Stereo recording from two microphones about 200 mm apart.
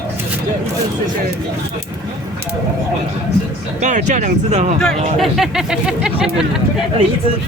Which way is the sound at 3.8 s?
35° right (ahead or behind).